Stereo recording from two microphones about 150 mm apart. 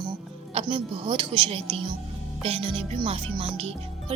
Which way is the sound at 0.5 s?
35° right (ahead or behind).